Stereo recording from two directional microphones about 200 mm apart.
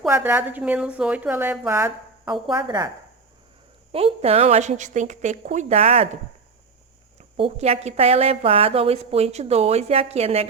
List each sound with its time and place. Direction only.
0.0 s a woman's voice: 10° right (ahead or behind)
3.9 s a woman's voice: 30° right (ahead or behind)
7.2 s a woman's voice: 30° right (ahead or behind)